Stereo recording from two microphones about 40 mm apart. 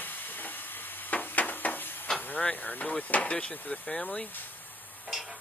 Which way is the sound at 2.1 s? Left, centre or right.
Left.